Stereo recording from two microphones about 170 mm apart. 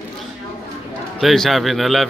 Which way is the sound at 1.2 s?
Centre (ahead or behind).